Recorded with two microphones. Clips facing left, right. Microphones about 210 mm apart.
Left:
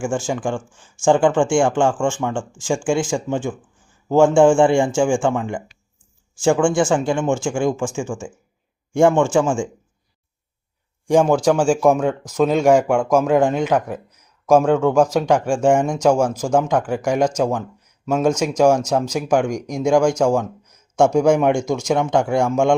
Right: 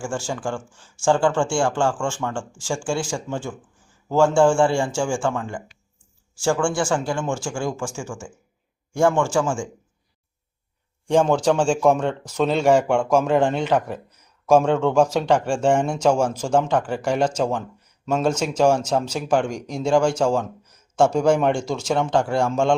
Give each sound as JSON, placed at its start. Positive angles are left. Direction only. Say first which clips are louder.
{"t": 0.0, "sound": "speech", "louder": "left 5 dB", "side_deg": 20}
{"t": 11.1, "sound": "speech", "louder": "left 3 dB", "side_deg": 10}